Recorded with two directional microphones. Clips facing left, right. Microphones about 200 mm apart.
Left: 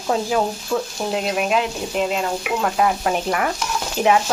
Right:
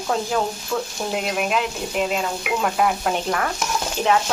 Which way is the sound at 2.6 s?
Centre (ahead or behind).